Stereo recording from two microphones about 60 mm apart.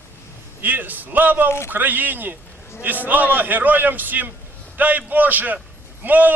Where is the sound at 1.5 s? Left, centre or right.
Left.